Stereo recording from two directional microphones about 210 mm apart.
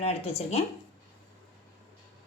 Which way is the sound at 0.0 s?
30° left (ahead or behind).